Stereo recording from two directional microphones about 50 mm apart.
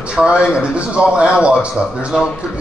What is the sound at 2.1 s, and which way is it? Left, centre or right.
Speech, centre.